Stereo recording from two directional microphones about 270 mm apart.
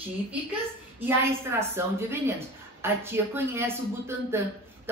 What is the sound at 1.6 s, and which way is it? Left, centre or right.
Speech, centre.